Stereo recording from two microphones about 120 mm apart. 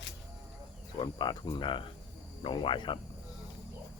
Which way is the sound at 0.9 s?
40° left (ahead or behind).